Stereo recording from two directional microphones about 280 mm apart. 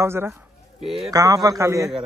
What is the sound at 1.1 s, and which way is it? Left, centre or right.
Speech, centre.